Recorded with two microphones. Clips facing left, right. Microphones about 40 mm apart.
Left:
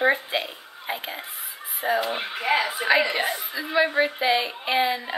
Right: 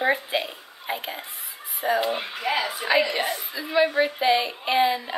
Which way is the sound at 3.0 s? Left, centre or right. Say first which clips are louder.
Even; left.